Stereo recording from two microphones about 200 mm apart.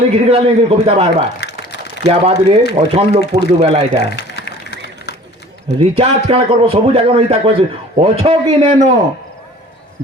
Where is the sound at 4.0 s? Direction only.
55° left (ahead or behind).